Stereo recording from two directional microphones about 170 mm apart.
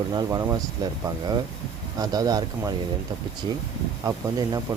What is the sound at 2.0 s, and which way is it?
Speech, 20° right (ahead or behind).